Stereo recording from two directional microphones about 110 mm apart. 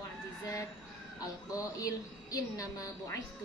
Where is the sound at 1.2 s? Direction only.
30° left (ahead or behind).